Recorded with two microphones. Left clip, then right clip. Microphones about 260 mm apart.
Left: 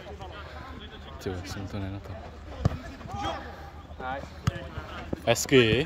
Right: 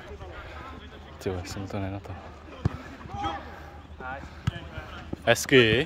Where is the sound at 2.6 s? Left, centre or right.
Centre.